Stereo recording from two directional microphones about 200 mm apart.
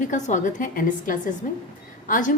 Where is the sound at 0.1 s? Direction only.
40° left (ahead or behind).